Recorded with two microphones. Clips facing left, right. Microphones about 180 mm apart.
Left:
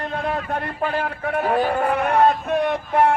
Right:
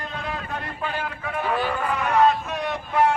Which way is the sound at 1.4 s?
45° left (ahead or behind).